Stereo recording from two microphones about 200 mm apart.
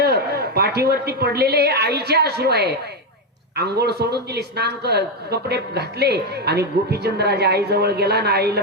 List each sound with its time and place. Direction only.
0.0 s a man's voice: 55° right (ahead or behind)